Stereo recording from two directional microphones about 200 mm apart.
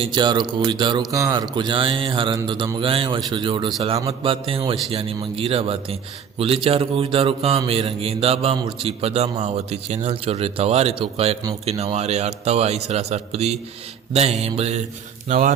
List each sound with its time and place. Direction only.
0.0 s a man's voice: 25° right (ahead or behind); by 15.5 s 40° right (ahead or behind)